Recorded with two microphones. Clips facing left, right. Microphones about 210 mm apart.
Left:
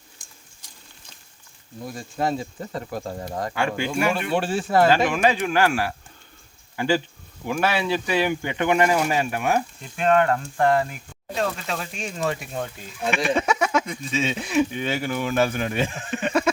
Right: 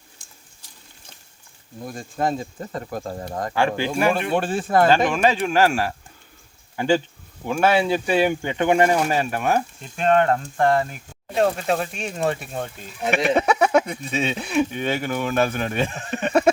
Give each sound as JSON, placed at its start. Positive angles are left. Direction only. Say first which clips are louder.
{"t": 1.9, "sound": "speech", "louder": "right 1 dB", "side_deg": -50}
{"t": 3.5, "sound": "speech", "louder": "right 4 dB", "side_deg": -35}
{"t": 4.1, "sound": "speech", "louder": "right 2 dB", "side_deg": -50}
{"t": 7.6, "sound": "speech", "louder": "right 5 dB", "side_deg": -50}
{"t": 8.7, "sound": "speech", "louder": "right 2 dB", "side_deg": -30}
{"t": 9.0, "sound": "speech", "louder": "right 1 dB", "side_deg": -40}
{"t": 13.0, "sound": "speech", "louder": "right 3 dB", "side_deg": -20}
{"t": 13.3, "sound": "a sound", "louder": "right 6 dB", "side_deg": -60}
{"t": 14.3, "sound": "speech", "louder": "even", "side_deg": -55}